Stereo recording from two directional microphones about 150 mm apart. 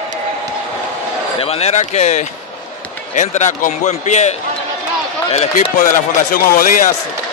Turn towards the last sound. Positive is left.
turn(degrees=65)  # may be behind; listen again after turning